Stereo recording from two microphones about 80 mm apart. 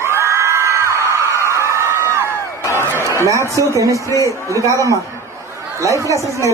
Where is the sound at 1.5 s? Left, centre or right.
Right.